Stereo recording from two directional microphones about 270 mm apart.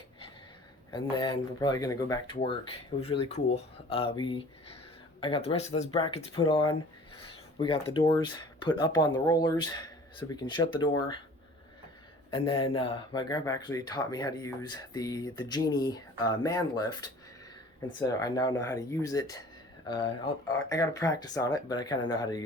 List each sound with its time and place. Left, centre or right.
0.9 s speech: centre
12.3 s speech: centre